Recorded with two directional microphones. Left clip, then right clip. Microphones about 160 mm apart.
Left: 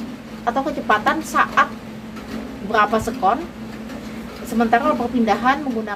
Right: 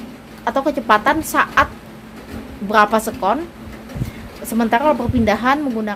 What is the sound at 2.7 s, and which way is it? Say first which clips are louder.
Child singing: right 3 dB; 90° right.